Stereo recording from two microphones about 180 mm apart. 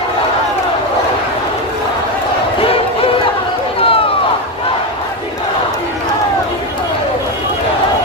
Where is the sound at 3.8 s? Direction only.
30° left (ahead or behind).